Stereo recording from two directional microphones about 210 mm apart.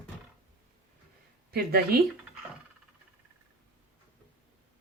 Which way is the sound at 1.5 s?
45° right (ahead or behind).